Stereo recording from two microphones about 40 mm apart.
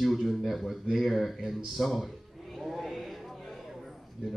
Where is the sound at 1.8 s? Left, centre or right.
Centre.